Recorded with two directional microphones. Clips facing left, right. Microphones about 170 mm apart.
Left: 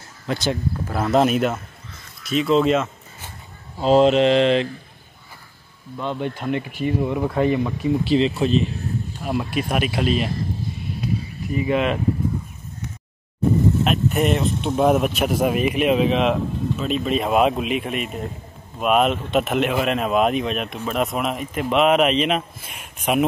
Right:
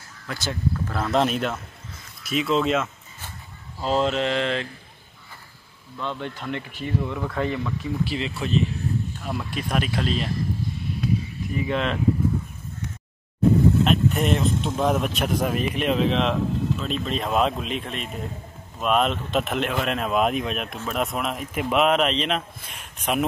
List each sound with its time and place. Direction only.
0.3 s speech: 20° left (ahead or behind)
0.9 s speech: 5° left (ahead or behind)
3.7 s speech: 20° left (ahead or behind)
5.9 s speech: 15° left (ahead or behind)
9.2 s speech: 10° left (ahead or behind)
11.6 s speech: 10° left (ahead or behind)
13.8 s speech: 5° left (ahead or behind)